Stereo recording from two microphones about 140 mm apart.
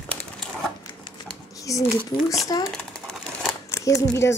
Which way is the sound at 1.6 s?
25° left (ahead or behind).